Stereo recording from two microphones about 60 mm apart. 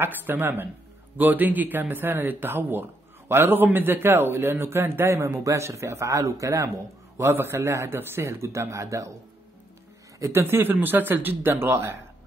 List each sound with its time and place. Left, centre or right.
0.0 s speech: right
7.2 s a man's voice: right
10.3 s a man's voice: right